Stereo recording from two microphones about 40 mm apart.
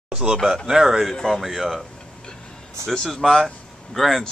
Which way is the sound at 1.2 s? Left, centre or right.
Centre.